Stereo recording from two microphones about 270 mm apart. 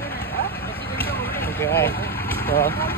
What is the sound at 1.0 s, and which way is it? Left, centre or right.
Vehicle, left.